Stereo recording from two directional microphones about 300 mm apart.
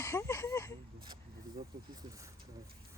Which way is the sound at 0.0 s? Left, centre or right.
Centre.